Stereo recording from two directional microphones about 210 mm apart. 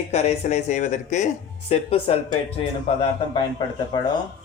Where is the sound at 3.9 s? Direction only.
20° left (ahead or behind).